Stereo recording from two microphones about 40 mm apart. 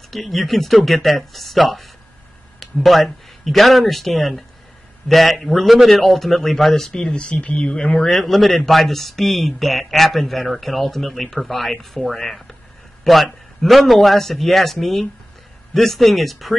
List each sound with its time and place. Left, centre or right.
0.1 s speech: centre
6.9 s speech: left
7.7 s speech: centre
8.1 s speech: centre